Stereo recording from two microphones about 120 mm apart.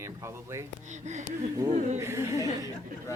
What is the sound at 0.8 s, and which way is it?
Speech, 85° right.